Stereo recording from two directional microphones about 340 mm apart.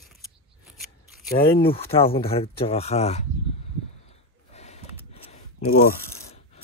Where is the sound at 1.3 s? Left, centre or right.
Centre.